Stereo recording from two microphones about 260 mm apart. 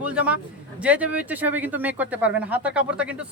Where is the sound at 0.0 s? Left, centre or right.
Centre.